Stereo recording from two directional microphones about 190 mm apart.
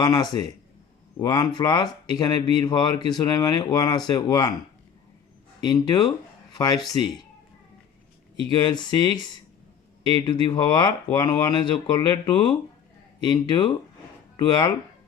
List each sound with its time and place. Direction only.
0.0 s speech: 20° left (ahead or behind)
5.6 s speech: 20° left (ahead or behind)
8.4 s speech: 20° left (ahead or behind)